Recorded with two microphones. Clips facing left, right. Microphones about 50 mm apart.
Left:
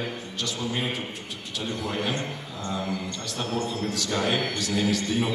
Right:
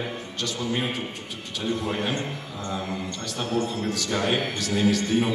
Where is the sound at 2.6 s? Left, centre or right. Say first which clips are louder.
Left 1 dB; right.